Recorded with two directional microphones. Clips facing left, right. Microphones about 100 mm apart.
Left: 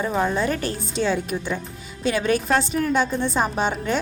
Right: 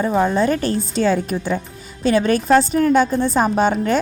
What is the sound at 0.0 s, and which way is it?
A woman's voice, 30° right (ahead or behind).